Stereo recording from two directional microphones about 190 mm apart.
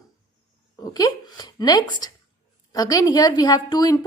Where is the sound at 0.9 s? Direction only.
20° left (ahead or behind).